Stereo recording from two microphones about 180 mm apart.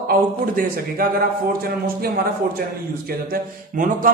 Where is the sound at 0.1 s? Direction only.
50° right (ahead or behind).